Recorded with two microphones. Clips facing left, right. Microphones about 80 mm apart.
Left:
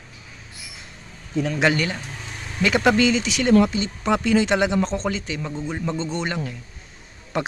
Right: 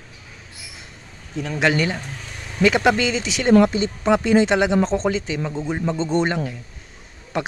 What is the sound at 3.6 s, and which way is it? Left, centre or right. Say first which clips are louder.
Speech: right 3 dB; right.